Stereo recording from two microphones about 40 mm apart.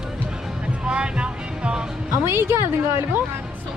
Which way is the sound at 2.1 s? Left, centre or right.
Right.